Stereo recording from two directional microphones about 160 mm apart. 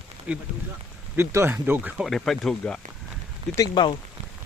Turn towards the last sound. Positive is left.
turn(degrees=30)  # may be behind; listen again after turning